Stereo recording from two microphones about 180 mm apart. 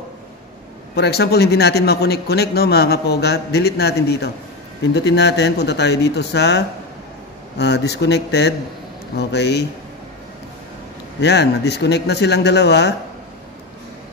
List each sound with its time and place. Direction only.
0.9 s a man's voice: 65° left (ahead or behind)
11.1 s speech: 70° left (ahead or behind)